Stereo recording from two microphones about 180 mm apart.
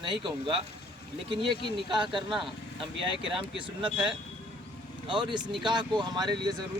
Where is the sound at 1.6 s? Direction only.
25° right (ahead or behind).